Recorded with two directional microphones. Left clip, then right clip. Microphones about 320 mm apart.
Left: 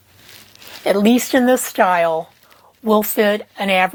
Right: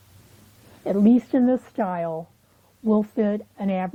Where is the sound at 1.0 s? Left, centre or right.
Centre.